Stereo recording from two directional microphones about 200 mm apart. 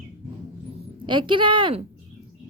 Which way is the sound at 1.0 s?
25° right (ahead or behind).